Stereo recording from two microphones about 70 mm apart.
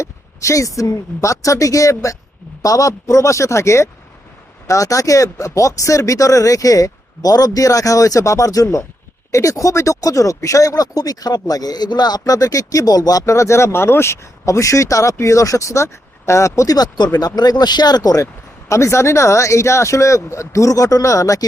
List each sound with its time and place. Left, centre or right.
0.0 s a sound: left
0.8 s speech: left
16.7 s speech: left
18.7 s speech: left